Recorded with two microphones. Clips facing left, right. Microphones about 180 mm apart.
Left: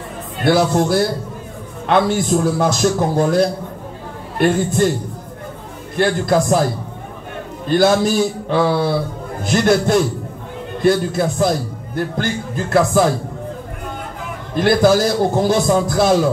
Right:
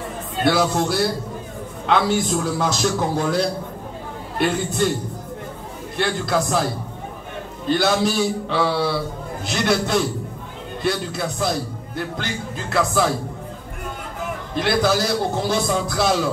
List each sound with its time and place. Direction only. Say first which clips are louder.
0.5 s a man's voice: left 5 dB; 55° left (ahead or behind)
5.9 s a man's voice: left 6 dB; 50° left (ahead or behind)
7.6 s a man's voice: left 5 dB; 50° left (ahead or behind)
14.5 s a man's voice: left 7 dB; 50° left (ahead or behind)